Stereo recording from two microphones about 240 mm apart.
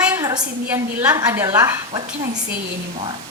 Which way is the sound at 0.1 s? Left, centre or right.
Centre.